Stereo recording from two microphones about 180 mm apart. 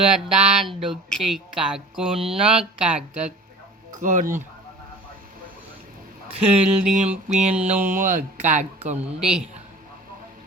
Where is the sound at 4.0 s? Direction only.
45° right (ahead or behind).